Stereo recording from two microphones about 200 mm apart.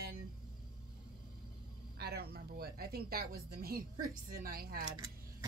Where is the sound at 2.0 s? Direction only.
50° right (ahead or behind).